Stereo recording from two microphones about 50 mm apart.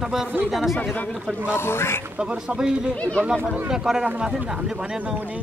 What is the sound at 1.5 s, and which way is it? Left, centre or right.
Speech, left.